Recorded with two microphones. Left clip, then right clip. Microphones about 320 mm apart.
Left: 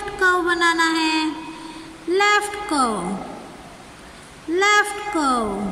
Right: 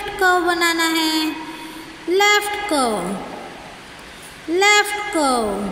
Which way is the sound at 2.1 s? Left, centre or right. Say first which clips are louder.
Right 2 dB; left.